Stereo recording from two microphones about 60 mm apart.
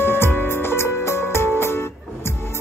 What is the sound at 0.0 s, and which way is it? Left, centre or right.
Music, left.